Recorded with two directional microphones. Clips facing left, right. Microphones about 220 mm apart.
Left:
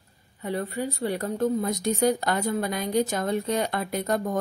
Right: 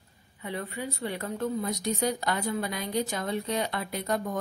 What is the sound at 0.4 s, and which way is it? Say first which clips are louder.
A woman's voice: left 6 dB; 40° left (ahead or behind).